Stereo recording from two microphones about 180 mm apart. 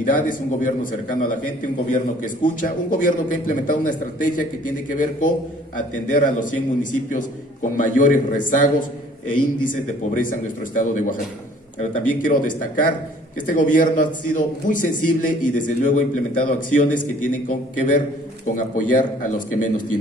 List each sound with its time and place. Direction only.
0.0 s a man's voice: 50° left (ahead or behind)